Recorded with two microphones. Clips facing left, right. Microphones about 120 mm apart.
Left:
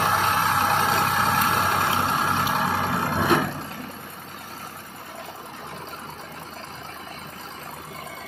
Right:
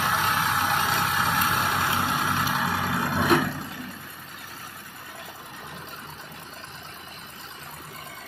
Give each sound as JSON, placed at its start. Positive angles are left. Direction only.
{"t": 0.3, "sound": "vehicle", "side_deg": 35}